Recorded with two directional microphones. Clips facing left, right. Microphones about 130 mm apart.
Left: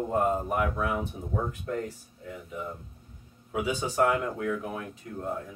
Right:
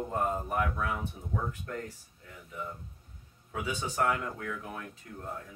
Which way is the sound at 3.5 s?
15° left (ahead or behind).